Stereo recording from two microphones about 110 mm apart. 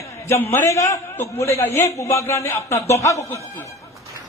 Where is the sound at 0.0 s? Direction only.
25° left (ahead or behind).